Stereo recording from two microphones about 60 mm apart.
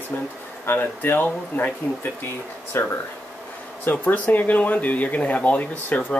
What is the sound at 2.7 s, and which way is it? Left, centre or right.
Speech, left.